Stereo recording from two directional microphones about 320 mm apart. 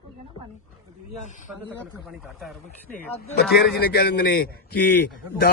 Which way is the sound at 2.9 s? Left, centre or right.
Left.